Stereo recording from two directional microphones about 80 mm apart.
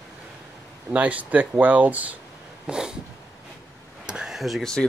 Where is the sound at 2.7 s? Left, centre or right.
Centre.